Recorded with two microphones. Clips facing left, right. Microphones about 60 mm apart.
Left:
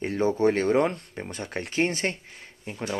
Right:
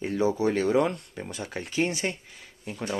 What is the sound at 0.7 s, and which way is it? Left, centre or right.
Speech, left.